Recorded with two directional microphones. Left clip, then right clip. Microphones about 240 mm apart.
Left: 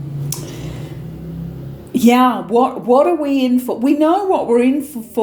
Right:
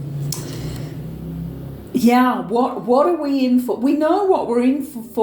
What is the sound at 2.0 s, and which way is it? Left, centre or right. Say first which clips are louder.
Speech: left 3 dB; left.